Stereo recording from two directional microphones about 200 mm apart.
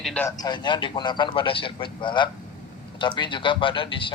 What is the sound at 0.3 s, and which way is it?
A man's voice, 20° left (ahead or behind).